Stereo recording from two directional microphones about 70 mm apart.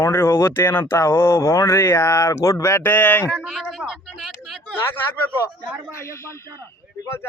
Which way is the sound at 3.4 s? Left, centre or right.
Centre.